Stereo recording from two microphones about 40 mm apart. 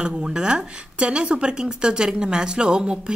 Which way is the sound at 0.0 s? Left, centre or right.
Right.